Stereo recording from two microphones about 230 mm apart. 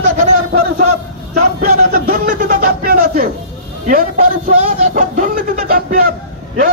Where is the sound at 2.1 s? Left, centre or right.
Right.